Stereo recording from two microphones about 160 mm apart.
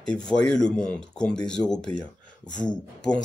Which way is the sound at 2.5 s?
25° left (ahead or behind).